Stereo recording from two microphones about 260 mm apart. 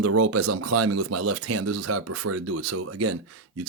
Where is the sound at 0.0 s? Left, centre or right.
Right.